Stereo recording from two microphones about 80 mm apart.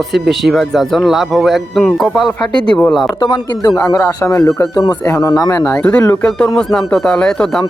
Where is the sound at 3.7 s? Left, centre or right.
Left.